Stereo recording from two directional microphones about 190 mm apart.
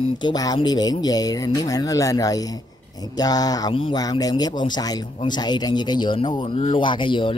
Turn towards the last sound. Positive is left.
turn(degrees=25)  # may be behind; listen again after turning